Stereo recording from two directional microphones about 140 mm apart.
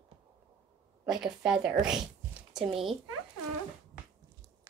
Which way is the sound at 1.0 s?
5° right (ahead or behind).